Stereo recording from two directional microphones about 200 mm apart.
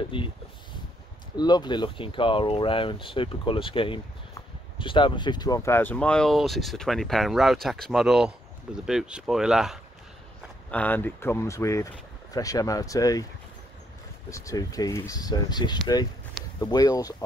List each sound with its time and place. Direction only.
0.1 s speech: 25° left (ahead or behind)
1.3 s speech: 20° left (ahead or behind); by 9.8 s 5° right (ahead or behind)
10.7 s speech: 10° left (ahead or behind)
14.3 s speech: 15° left (ahead or behind)